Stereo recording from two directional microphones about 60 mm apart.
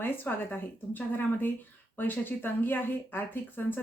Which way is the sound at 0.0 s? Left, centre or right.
Left.